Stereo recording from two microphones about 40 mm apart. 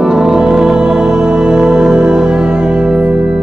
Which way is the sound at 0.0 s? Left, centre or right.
Centre.